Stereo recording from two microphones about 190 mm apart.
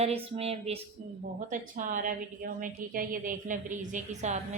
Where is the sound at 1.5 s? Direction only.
45° right (ahead or behind).